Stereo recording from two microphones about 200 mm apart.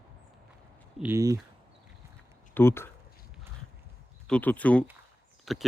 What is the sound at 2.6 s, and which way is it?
Speech, 10° left (ahead or behind).